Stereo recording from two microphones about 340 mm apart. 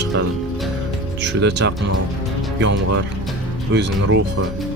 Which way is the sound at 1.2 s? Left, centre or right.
Right.